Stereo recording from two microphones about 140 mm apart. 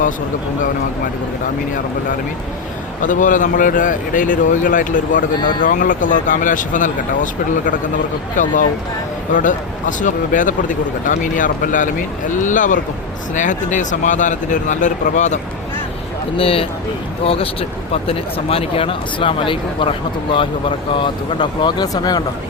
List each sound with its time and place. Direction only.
3.0 s speech: 70° left (ahead or behind)
8.4 s speech: 70° left (ahead or behind)
16.4 s speech: 40° left (ahead or behind)